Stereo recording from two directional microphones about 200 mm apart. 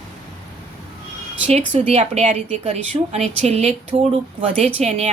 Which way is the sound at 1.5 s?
30° right (ahead or behind).